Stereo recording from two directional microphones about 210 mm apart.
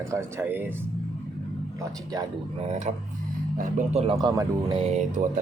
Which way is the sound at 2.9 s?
35° right (ahead or behind).